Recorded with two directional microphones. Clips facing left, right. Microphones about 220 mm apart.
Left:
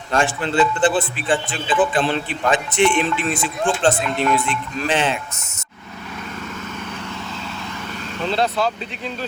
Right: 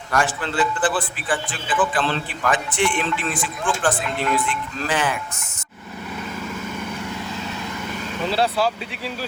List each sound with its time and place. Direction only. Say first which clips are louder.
0.1 s a man's voice: left 3 dB; 25° left (ahead or behind)
8.2 s speech: left 1 dB; 5° right (ahead or behind)